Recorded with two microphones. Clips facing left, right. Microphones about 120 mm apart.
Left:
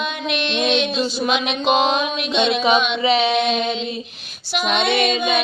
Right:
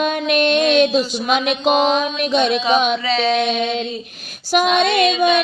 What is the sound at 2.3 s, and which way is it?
Mantra, 45° right (ahead or behind).